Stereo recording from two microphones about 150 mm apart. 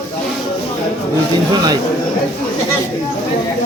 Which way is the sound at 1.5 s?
25° right (ahead or behind).